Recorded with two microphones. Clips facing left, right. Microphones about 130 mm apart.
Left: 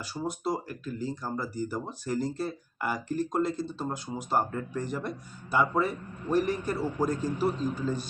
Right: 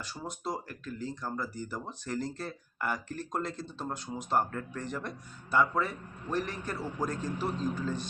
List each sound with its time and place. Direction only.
0.0 s speech: 5° left (ahead or behind)